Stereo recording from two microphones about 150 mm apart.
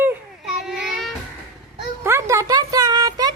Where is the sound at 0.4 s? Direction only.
Centre (ahead or behind).